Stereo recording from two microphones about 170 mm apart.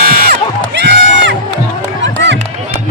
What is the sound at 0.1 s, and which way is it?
Music, 60° right (ahead or behind).